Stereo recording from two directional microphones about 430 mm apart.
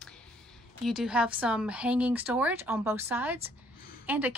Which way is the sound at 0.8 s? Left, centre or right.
Centre.